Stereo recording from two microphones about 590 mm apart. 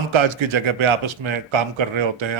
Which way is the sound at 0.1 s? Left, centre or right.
Right.